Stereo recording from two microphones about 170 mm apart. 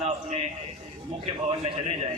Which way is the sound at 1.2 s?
35° right (ahead or behind).